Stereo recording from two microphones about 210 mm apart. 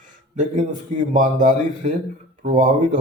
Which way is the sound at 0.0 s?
40° right (ahead or behind).